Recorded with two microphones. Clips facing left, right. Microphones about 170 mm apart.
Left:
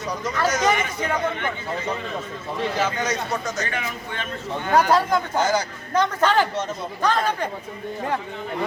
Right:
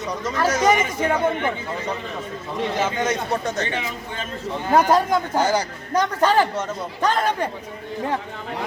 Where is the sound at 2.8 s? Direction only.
20° right (ahead or behind).